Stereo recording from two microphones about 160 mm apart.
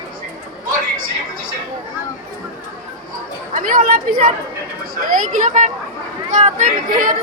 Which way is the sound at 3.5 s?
60° right (ahead or behind).